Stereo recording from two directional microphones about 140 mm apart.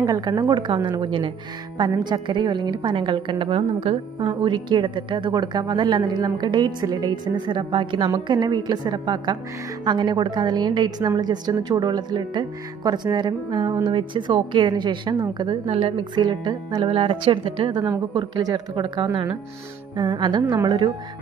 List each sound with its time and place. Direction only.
0.0 s a woman's voice: 30° right (ahead or behind)
15.6 s a woman's voice: 45° right (ahead or behind)
16.0 s a woman's voice: 35° right (ahead or behind)